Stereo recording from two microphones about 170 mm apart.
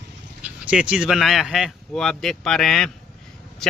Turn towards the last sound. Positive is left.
turn(degrees=5)  # may be behind; listen again after turning